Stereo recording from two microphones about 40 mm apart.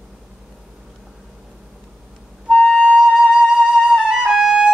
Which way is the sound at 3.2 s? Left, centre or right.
Centre.